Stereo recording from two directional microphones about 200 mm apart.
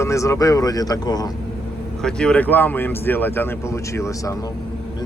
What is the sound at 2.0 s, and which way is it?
Speech, 5° left (ahead or behind).